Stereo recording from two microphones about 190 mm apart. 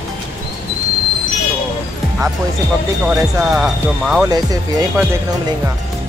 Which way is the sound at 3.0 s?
5° right (ahead or behind).